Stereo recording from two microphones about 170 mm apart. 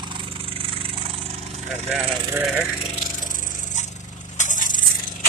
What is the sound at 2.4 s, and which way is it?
Speech, 5° right (ahead or behind).